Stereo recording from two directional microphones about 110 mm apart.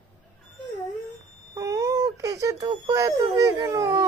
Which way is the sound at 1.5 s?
30° right (ahead or behind).